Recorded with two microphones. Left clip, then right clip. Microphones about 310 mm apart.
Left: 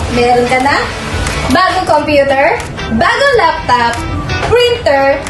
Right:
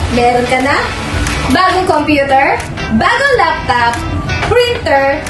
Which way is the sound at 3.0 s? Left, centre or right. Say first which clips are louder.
Left 1 dB; centre.